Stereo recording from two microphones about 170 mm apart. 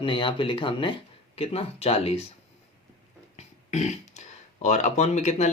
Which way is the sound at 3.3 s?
40° left (ahead or behind).